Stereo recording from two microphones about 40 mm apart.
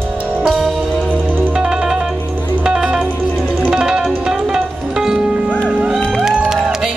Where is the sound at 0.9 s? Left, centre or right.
Left.